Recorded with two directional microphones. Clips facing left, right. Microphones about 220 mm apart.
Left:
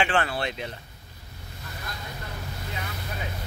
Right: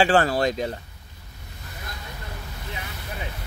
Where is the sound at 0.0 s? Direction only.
40° right (ahead or behind).